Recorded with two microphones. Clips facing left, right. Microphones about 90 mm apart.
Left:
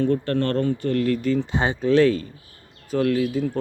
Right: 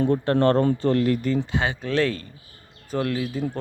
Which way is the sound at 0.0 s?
30° right (ahead or behind).